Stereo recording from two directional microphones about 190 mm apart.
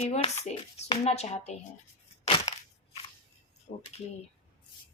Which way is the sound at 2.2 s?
25° left (ahead or behind).